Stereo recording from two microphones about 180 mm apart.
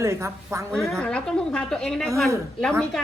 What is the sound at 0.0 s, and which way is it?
Speech, 15° right (ahead or behind).